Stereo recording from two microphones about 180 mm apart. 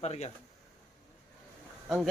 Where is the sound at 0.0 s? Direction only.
35° left (ahead or behind).